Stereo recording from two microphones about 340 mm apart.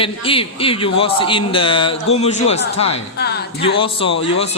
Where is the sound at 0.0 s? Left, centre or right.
Centre.